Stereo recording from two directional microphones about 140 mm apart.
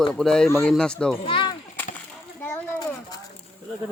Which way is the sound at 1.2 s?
35° left (ahead or behind).